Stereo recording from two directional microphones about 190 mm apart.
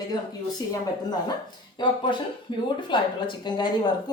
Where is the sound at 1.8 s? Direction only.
25° left (ahead or behind).